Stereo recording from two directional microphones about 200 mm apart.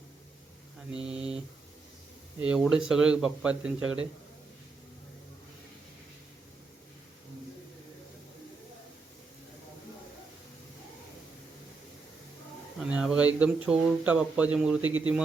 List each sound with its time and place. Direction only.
1.0 s speech: 5° right (ahead or behind)
2.4 s speech: 5° right (ahead or behind)
12.8 s speech: 5° right (ahead or behind)
14.8 s speech: 85° right